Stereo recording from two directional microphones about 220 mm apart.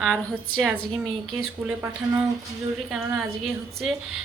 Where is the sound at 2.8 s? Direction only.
Centre (ahead or behind).